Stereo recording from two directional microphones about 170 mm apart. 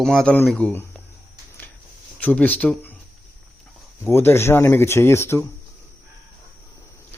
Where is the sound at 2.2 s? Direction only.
10° left (ahead or behind).